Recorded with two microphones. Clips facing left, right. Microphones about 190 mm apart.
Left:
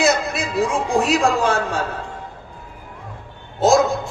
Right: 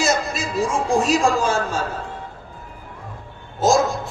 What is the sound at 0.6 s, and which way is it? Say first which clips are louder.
Speech: even; 60° left (ahead or behind).